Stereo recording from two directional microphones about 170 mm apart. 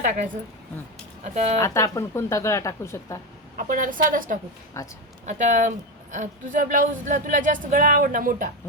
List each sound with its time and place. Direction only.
0.0 s speech: 45° right (ahead or behind)
1.5 s speech: 15° left (ahead or behind)
3.6 s speech: 55° right (ahead or behind)
4.8 s speech: 20° left (ahead or behind)
5.2 s speech: 45° right (ahead or behind)